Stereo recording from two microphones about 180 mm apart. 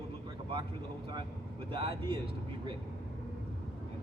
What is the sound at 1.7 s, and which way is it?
Speech, 30° right (ahead or behind).